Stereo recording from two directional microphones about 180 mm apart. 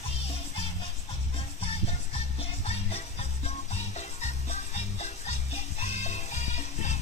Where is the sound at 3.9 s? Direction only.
40° left (ahead or behind).